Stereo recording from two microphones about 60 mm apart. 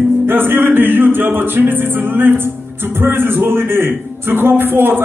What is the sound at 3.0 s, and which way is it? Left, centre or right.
A man's voice, right.